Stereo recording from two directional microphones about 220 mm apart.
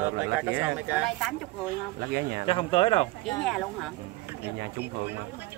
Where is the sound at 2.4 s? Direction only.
25° left (ahead or behind).